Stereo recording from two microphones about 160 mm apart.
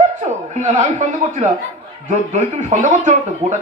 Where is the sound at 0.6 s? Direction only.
50° right (ahead or behind).